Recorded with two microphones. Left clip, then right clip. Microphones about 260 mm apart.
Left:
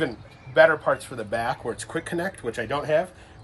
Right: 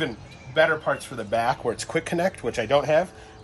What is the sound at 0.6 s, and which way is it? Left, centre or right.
Speech, centre.